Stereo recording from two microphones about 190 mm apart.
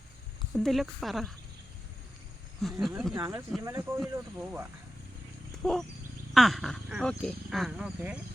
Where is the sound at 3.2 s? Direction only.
10° right (ahead or behind).